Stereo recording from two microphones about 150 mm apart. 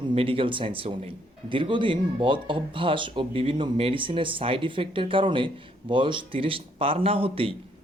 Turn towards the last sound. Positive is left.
turn(degrees=-40)  # may be behind; listen again after turning